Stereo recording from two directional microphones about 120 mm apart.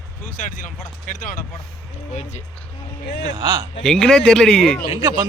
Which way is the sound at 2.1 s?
75° left (ahead or behind).